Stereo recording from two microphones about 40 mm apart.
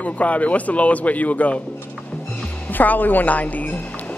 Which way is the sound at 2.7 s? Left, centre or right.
Left.